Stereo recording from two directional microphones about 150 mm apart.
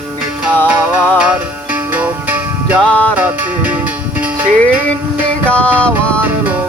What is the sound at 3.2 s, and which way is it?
Music, 10° right (ahead or behind).